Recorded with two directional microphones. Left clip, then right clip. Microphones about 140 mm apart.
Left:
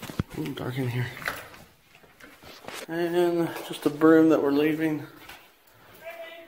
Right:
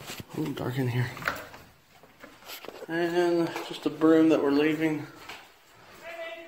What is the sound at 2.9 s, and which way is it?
Speech, 35° left (ahead or behind).